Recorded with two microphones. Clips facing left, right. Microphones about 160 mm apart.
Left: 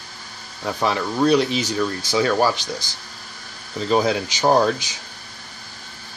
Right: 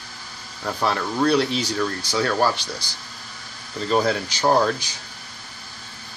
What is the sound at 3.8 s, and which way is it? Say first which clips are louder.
Speech: left 2 dB; 10° left (ahead or behind).